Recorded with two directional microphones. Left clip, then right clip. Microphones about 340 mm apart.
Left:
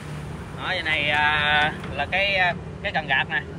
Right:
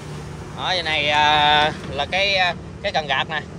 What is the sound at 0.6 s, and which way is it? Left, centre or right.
Speech, centre.